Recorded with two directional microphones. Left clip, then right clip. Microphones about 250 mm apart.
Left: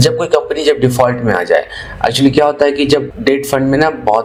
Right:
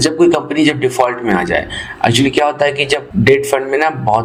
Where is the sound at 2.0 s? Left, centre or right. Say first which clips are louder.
Left 2 dB; centre.